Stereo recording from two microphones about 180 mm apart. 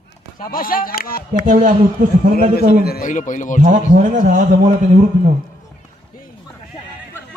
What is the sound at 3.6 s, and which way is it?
A man's voice, 45° right (ahead or behind).